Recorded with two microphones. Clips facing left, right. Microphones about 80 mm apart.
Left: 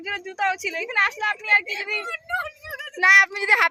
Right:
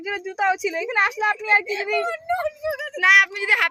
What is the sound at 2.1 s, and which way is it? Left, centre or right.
Speech, right.